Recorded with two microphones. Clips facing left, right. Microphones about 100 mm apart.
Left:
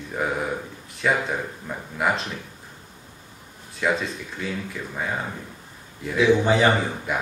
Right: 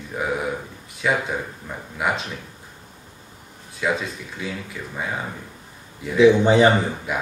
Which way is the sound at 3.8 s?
Centre (ahead or behind).